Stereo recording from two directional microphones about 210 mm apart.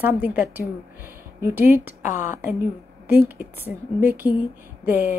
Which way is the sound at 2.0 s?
35° left (ahead or behind).